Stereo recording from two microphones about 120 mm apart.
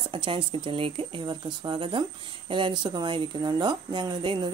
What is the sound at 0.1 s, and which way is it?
Speech, 45° right (ahead or behind).